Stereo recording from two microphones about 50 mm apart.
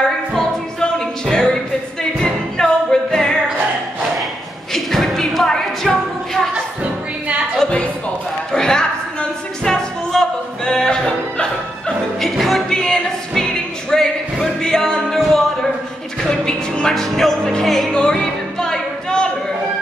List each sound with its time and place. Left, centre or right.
0.3 s music: centre
4.7 s music: centre
6.5 s music: right
8.5 s music: centre
12.2 s music: centre
15.1 s a sound: centre
16.3 s music: centre
17.6 s music: centre
17.9 s music: centre